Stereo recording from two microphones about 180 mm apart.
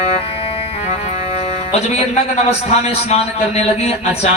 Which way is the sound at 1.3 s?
35° left (ahead or behind).